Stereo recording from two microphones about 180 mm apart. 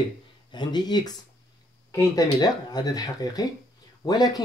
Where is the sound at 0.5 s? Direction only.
25° left (ahead or behind).